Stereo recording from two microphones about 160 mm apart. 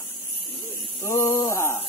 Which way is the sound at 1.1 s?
15° left (ahead or behind).